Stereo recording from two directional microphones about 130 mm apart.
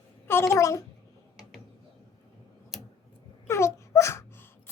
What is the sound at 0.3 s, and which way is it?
Speech, 20° left (ahead or behind).